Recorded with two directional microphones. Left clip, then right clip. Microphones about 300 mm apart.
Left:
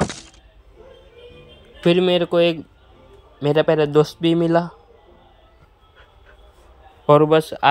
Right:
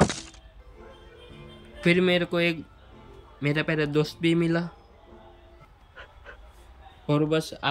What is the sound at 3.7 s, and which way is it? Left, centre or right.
Speech, centre.